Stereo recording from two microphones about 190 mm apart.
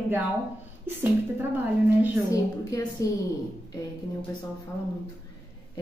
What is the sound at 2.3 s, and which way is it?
Speech, 15° left (ahead or behind).